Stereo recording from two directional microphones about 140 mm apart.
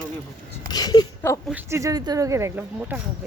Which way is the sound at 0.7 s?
30° left (ahead or behind).